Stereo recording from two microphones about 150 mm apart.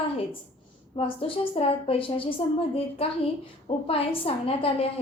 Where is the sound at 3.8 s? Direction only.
40° left (ahead or behind).